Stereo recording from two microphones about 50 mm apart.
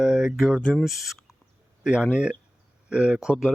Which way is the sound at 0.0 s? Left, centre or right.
Centre.